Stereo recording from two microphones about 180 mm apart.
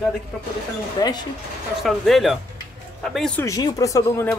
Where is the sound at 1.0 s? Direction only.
20° left (ahead or behind).